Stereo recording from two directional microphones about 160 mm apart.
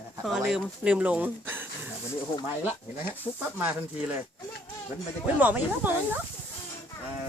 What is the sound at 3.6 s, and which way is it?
Speech, 10° right (ahead or behind).